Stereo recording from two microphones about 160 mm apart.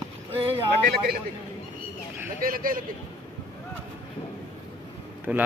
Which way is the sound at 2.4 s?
65° right (ahead or behind).